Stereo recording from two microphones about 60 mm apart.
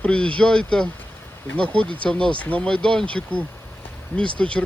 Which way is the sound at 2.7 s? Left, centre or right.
Centre.